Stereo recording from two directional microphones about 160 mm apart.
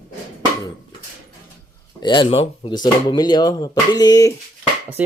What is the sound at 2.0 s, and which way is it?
Speech, 30° left (ahead or behind).